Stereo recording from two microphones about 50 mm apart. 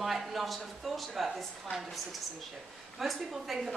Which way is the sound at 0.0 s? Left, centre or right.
Centre.